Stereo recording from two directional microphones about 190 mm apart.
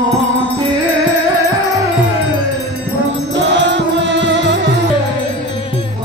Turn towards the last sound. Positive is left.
turn(degrees=-70)  # may be behind; listen again after turning